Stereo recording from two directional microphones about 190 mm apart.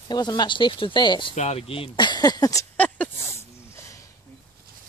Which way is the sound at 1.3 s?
35° left (ahead or behind).